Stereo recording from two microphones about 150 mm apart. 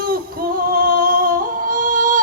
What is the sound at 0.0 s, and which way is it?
Music, 85° right.